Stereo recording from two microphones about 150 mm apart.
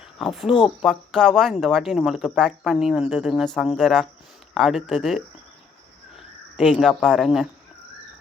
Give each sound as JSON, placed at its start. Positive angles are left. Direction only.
{"t": 0.0, "sound": "a sound", "side_deg": 0}
{"t": 0.5, "sound": "speech", "side_deg": 30}
{"t": 0.9, "sound": "speech", "side_deg": 5}